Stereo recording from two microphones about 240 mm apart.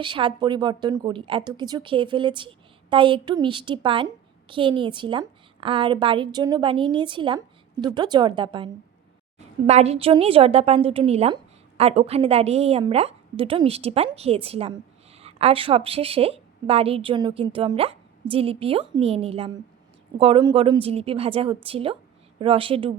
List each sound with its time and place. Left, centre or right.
0.0 s a woman's voice: right